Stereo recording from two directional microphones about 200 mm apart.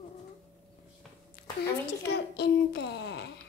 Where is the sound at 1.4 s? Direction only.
50° left (ahead or behind).